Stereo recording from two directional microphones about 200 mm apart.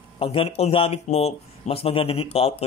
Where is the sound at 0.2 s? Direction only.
30° left (ahead or behind).